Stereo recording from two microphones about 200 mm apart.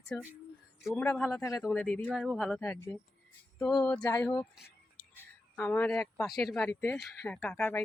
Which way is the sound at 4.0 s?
15° left (ahead or behind).